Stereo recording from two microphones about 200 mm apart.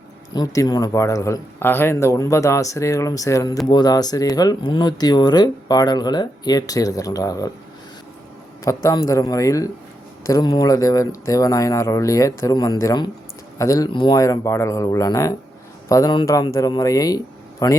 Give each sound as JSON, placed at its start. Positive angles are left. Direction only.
{"t": 0.3, "sound": "speech", "side_deg": 15}
{"t": 8.6, "sound": "speech", "side_deg": 15}